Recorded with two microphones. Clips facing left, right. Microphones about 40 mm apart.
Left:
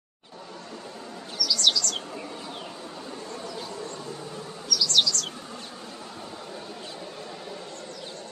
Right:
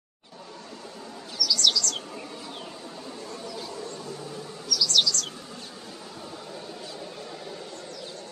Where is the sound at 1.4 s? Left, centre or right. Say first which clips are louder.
Even; centre.